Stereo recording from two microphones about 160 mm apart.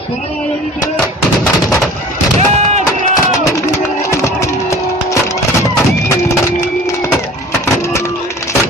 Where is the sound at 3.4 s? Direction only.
20° left (ahead or behind).